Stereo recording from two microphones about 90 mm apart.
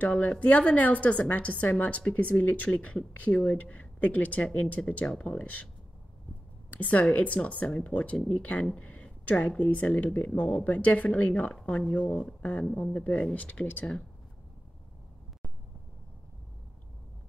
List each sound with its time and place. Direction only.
0.0 s speech: 10° left (ahead or behind)
6.7 s speech: 15° left (ahead or behind)